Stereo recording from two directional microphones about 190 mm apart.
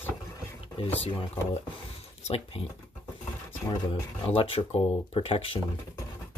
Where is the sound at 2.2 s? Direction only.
30° left (ahead or behind).